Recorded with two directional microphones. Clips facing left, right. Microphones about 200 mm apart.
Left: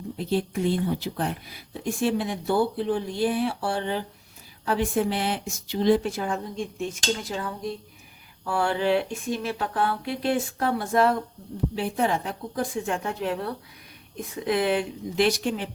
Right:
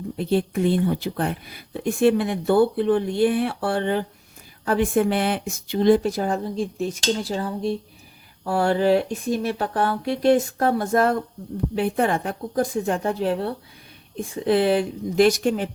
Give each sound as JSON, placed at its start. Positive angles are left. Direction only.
{"t": 0.2, "sound": "speech", "side_deg": -60}
{"t": 6.0, "sound": "speech", "side_deg": -35}
{"t": 11.7, "sound": "speech", "side_deg": -55}